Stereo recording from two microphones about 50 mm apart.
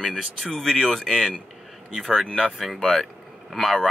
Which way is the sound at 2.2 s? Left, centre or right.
Centre.